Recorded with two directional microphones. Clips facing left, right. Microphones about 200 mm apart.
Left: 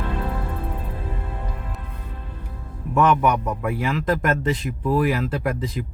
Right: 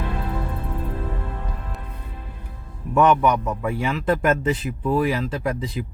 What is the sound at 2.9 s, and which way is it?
Speech, centre (ahead or behind).